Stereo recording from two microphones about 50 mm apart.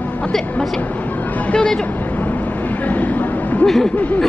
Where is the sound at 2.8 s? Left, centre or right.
Left.